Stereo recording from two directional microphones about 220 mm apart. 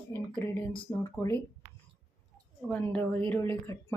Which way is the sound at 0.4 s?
10° left (ahead or behind).